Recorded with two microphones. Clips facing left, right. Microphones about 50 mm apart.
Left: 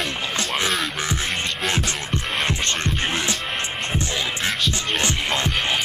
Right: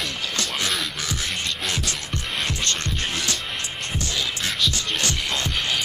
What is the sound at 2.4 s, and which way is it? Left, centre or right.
Music, left.